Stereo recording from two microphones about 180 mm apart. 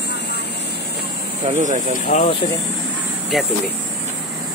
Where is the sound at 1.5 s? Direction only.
40° right (ahead or behind).